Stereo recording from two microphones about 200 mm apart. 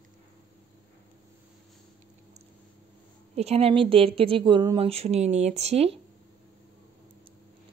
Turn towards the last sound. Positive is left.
turn(degrees=-30)  # may be behind; listen again after turning